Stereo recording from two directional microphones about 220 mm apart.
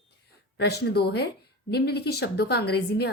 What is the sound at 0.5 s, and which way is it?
Speech, 50° left (ahead or behind).